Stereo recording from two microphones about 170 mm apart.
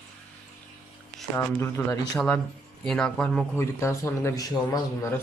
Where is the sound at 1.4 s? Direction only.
15° left (ahead or behind).